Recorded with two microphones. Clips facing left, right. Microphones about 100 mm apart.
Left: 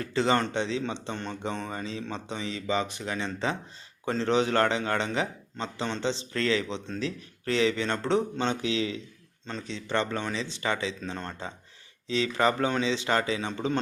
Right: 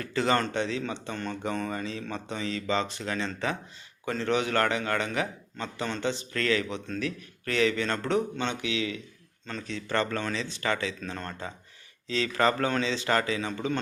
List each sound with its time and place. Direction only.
0.0 s a man's voice: 25° left (ahead or behind)
9.5 s a man's voice: 20° left (ahead or behind)